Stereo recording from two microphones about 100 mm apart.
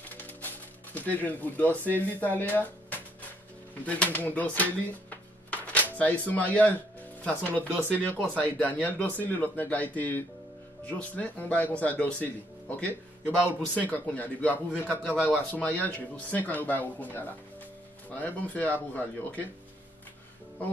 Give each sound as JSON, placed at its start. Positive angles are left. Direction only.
{"t": 0.2, "sound": "music", "side_deg": 20}
{"t": 1.1, "sound": "speech", "side_deg": 15}
{"t": 5.5, "sound": "music", "side_deg": 15}
{"t": 5.9, "sound": "speech", "side_deg": 15}